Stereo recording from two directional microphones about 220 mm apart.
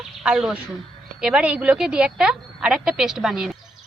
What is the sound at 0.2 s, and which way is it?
A woman's voice, 5° right (ahead or behind).